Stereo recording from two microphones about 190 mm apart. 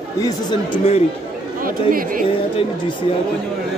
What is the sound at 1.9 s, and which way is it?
Speech, 45° right (ahead or behind).